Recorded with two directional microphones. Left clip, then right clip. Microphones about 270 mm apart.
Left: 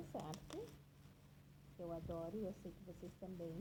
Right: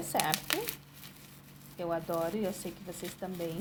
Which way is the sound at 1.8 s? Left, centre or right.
Right.